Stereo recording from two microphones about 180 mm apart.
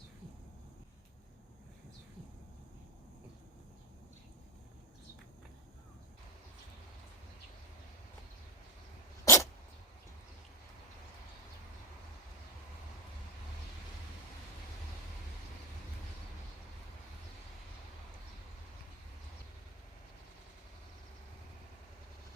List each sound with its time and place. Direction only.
9.2 s dog: 15° left (ahead or behind)